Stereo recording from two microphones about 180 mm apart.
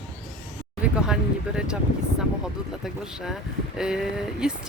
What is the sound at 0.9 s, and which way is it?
Speech, 5° right (ahead or behind).